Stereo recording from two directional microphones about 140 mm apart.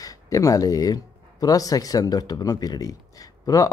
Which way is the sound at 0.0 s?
25° left (ahead or behind).